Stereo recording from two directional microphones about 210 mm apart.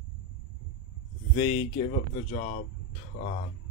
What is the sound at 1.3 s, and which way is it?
Speech, 25° left (ahead or behind).